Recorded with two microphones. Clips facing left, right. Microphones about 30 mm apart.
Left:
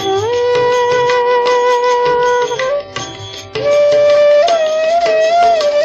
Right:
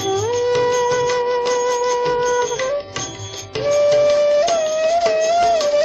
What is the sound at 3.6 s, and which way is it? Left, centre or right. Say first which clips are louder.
Music: left 5 dB; left.